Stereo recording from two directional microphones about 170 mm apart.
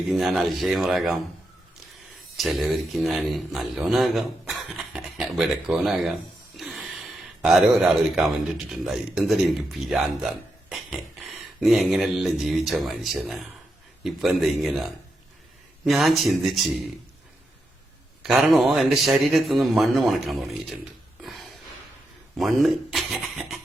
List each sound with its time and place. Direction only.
0.1 s a man's voice: centre (ahead or behind)
2.3 s a man's voice: centre (ahead or behind)
6.6 s a sound: centre (ahead or behind)
7.4 s a man's voice: 5° right (ahead or behind)
10.7 s a sound: centre (ahead or behind)
14.0 s a man's voice: centre (ahead or behind)
18.2 s a man's voice: centre (ahead or behind)
21.2 s a sound: centre (ahead or behind)
22.4 s a man's voice: centre (ahead or behind)